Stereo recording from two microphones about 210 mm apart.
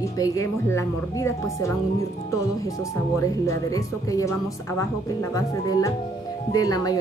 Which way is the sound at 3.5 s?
15° left (ahead or behind).